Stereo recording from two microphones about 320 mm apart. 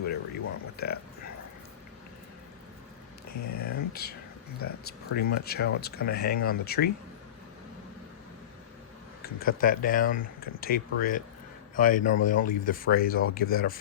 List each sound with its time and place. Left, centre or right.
0.0 s a sound: left
3.4 s speech: left
3.7 s speech: left
9.2 s speech: left